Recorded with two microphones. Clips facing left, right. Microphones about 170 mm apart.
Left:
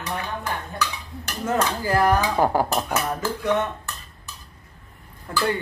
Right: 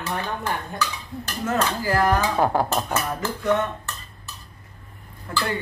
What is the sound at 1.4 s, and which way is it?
Speech, 20° left (ahead or behind).